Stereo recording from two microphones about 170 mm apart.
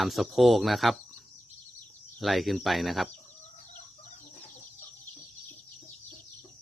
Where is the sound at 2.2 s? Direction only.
Centre (ahead or behind).